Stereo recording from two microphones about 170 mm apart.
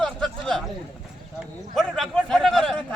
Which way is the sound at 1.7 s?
Centre (ahead or behind).